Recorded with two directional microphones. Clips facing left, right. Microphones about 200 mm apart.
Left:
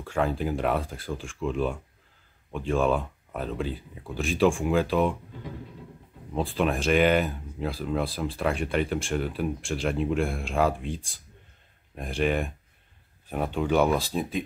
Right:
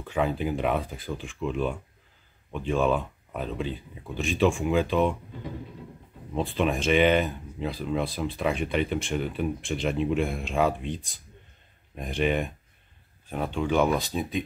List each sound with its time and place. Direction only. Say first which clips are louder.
0.1 s speech: even; centre (ahead or behind)
6.3 s speech: even; centre (ahead or behind)
12.0 s speech: even; centre (ahead or behind)